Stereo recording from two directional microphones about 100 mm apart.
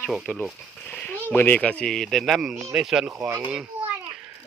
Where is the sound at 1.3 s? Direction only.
20° left (ahead or behind); by 3.3 s 5° right (ahead or behind).